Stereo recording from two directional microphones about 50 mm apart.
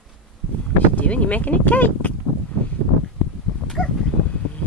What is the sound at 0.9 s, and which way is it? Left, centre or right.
Speech, left.